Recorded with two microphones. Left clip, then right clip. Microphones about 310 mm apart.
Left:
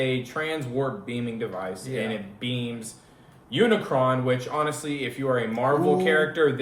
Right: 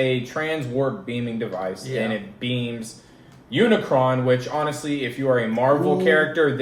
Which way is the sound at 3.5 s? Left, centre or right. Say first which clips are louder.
Right 3 dB; centre.